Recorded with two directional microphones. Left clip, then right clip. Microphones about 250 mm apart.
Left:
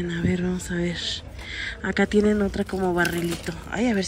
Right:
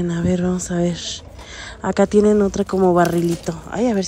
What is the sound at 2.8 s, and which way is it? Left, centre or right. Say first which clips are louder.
Speech: right 8 dB; left.